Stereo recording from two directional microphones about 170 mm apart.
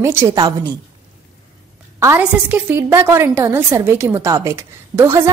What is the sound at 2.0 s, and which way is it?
A woman's voice, 15° right (ahead or behind).